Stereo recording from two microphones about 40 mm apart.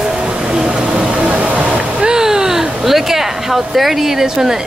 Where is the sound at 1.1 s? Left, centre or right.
Right.